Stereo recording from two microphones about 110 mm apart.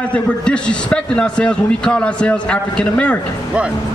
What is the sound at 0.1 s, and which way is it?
A man's voice, 10° left (ahead or behind).